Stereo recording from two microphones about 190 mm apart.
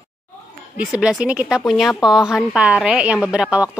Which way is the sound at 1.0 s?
5° right (ahead or behind).